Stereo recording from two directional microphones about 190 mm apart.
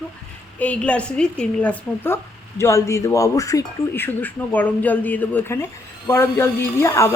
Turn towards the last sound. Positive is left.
turn(degrees=15)  # may be behind; listen again after turning